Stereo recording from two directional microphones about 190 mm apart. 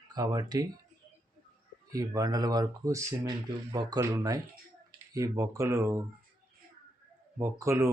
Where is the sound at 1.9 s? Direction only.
20° right (ahead or behind).